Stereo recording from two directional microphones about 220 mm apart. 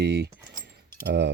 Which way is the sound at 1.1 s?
50° right (ahead or behind).